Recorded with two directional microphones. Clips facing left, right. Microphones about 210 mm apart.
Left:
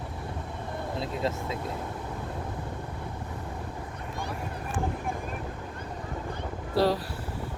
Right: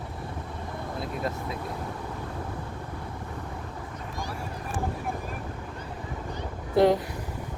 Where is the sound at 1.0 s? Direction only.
25° left (ahead or behind).